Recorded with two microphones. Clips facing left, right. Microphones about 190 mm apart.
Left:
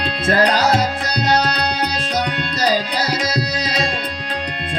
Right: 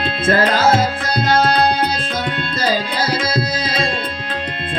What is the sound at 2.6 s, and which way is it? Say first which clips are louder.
Tabla: even; 50° right (ahead or behind).